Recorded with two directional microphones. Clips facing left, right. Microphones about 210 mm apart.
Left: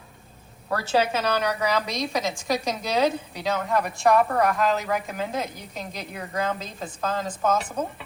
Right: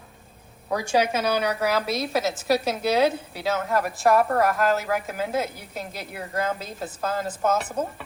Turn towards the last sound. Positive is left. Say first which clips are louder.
# even
turn(degrees=-5)  # may be behind; listen again after turning